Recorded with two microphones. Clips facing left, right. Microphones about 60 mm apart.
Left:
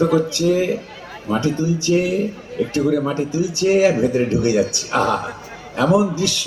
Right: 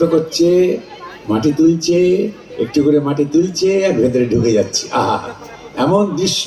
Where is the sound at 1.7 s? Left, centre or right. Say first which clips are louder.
Right 6 dB; right.